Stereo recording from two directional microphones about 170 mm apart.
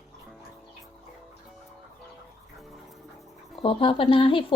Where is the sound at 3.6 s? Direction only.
30° left (ahead or behind).